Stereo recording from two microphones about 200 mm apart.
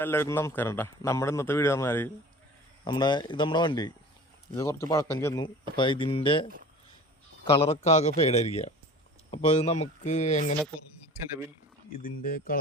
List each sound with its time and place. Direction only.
0.0 s a man's voice: 10° left (ahead or behind)
7.5 s speech: 30° left (ahead or behind)
11.9 s speech: 45° left (ahead or behind)